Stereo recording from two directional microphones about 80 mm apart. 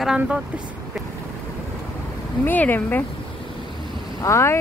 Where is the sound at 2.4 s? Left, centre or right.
Left.